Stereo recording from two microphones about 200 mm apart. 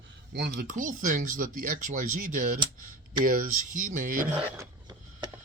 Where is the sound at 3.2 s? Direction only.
45° right (ahead or behind).